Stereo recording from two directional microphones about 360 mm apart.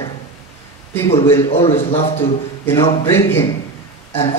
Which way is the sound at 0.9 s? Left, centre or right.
Centre.